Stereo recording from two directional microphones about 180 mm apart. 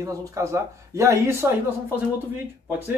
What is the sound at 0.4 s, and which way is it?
Speech, 15° right (ahead or behind).